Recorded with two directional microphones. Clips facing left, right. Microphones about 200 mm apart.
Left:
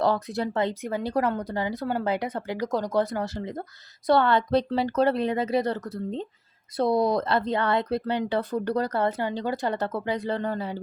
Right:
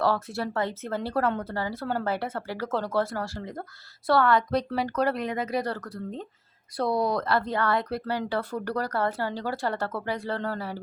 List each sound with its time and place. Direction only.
0.0 s speech: 20° left (ahead or behind)